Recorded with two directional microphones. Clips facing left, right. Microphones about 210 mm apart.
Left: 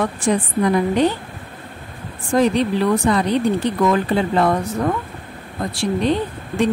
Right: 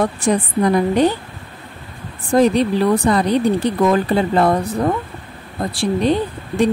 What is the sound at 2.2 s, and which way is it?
Speech, 35° right (ahead or behind).